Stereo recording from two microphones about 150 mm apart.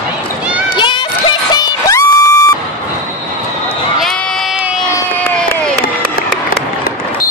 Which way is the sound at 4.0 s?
Centre (ahead or behind).